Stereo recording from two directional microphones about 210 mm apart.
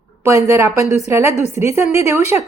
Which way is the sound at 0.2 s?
15° right (ahead or behind).